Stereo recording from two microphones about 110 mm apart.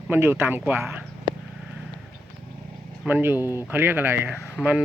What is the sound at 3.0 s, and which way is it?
Speech, 15° right (ahead or behind).